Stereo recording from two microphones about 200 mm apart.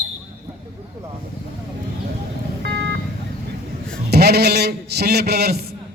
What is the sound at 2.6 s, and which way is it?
Vehicle, 55° right (ahead or behind).